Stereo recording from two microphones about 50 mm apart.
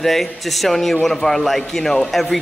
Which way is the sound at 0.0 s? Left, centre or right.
Centre.